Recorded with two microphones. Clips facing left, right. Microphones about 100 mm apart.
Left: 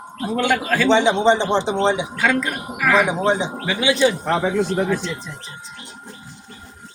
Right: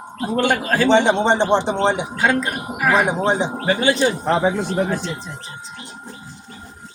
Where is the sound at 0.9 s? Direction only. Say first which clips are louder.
Even; 60° right (ahead or behind).